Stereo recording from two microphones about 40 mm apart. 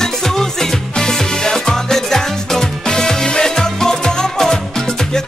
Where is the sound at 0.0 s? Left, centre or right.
Centre.